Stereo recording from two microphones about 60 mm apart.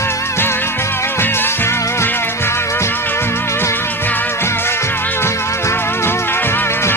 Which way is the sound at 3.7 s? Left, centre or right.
Left.